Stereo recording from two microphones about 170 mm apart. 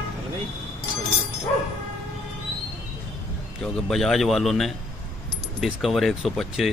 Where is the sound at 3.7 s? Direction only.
Centre (ahead or behind).